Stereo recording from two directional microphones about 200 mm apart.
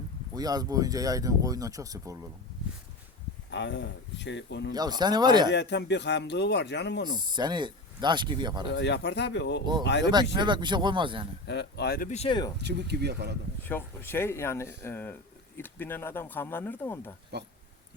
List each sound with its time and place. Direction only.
0.3 s speech: 20° right (ahead or behind)
3.5 s speech: 60° left (ahead or behind)
4.7 s speech: 20° right (ahead or behind)
5.5 s speech: 60° left (ahead or behind)
7.3 s speech: 20° right (ahead or behind)
8.6 s speech: 60° left (ahead or behind)
10.3 s speech: 20° right (ahead or behind)
11.4 s speech: 55° left (ahead or behind)
12.1 s speech: 30° left (ahead or behind)
12.5 s speech: 55° right (ahead or behind)
13.7 s speech: 10° left (ahead or behind)